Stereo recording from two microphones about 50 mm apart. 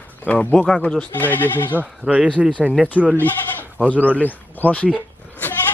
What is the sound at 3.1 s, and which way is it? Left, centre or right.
A man's voice, left.